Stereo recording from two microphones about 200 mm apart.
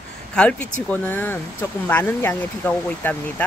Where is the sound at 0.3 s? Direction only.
5° left (ahead or behind).